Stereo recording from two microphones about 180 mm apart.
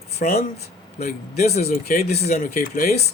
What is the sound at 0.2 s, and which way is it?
Speech, 50° left (ahead or behind).